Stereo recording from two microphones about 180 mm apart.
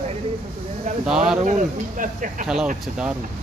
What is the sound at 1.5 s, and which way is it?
Speech, 45° right (ahead or behind).